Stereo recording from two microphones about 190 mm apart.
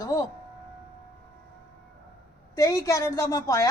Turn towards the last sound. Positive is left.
turn(degrees=15)  # may be behind; listen again after turning